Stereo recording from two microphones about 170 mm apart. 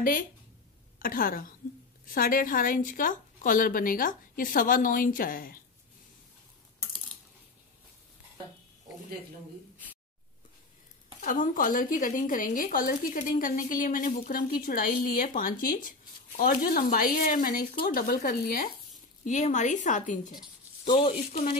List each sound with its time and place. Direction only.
0.0 s a woman's voice: 55° left (ahead or behind)
11.1 s a woman's voice: 50° left (ahead or behind)
19.2 s a woman's voice: 45° left (ahead or behind)